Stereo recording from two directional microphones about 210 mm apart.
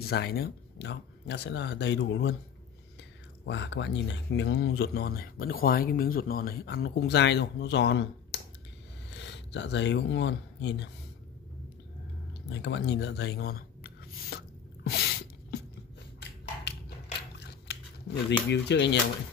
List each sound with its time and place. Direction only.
0.0 s speech: 50° left (ahead or behind)
3.4 s speech: 55° left (ahead or behind)
12.6 s a sound: 55° left (ahead or behind)
18.5 s speech: 55° left (ahead or behind)